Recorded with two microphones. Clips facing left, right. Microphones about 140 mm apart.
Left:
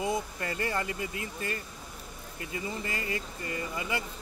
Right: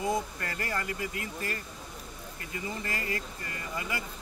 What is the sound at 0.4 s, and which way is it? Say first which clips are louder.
Speech: left 3 dB; 25° left (ahead or behind).